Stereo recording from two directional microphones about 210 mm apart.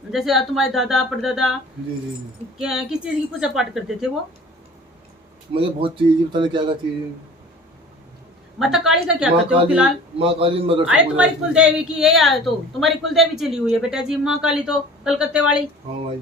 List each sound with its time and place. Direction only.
0.1 s speech: centre (ahead or behind)
2.6 s speech: 5° right (ahead or behind)
5.5 s speech: 25° right (ahead or behind)
8.5 s speech: centre (ahead or behind)
10.2 s speech: 25° right (ahead or behind)
10.8 s speech: 5° right (ahead or behind)